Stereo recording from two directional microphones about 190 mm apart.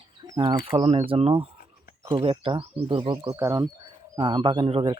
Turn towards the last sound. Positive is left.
turn(degrees=-30)  # may be behind; listen again after turning